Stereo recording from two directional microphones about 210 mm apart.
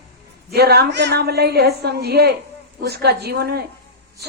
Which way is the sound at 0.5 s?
50° right (ahead or behind).